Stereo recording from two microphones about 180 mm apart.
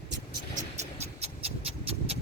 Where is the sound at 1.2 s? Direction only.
35° right (ahead or behind).